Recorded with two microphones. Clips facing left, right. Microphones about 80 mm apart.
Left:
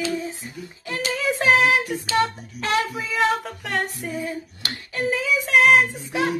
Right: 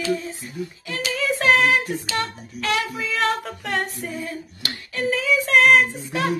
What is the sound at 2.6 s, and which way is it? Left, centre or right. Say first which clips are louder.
Speech: left 1 dB; left.